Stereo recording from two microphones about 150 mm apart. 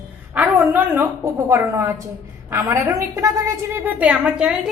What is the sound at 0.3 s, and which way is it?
A woman's voice, 15° right (ahead or behind).